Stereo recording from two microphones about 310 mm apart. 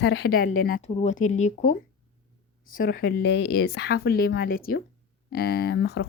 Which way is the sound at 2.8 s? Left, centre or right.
Left.